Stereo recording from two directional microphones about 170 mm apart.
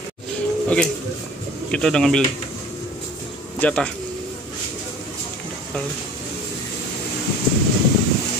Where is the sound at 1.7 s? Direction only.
5° left (ahead or behind).